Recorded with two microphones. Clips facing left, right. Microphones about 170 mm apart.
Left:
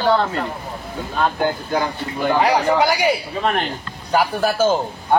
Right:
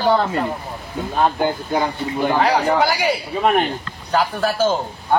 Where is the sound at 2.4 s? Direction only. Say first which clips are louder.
Left 1 dB; 20° left (ahead or behind).